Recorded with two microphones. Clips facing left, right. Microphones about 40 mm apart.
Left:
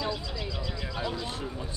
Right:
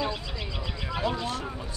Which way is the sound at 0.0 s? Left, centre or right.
Right.